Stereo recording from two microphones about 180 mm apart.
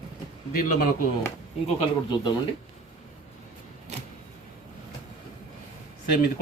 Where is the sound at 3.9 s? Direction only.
40° right (ahead or behind).